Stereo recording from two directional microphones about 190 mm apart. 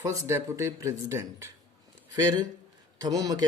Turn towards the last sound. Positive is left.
turn(degrees=-20)  # may be behind; listen again after turning